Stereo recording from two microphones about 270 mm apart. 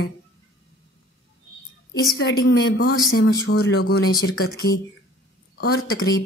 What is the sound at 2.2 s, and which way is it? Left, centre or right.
A woman's voice, left.